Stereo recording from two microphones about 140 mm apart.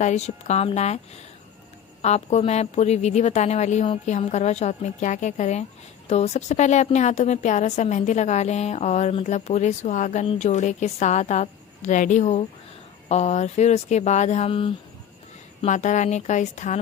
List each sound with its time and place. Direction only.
0.0 s a woman's voice: 55° left (ahead or behind)
15.6 s a woman's voice: 60° left (ahead or behind)